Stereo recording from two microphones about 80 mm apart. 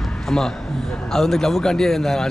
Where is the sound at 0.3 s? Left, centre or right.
Centre.